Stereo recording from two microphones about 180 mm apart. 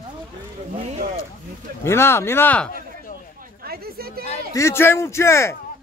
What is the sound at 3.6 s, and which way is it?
Speech, 60° right (ahead or behind).